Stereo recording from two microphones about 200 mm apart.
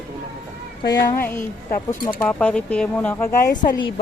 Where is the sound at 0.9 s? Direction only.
20° left (ahead or behind).